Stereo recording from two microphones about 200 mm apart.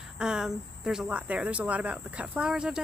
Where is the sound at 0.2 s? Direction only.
5° right (ahead or behind).